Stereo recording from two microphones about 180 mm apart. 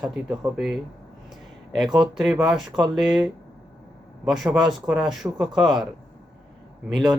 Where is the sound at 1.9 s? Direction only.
5° right (ahead or behind).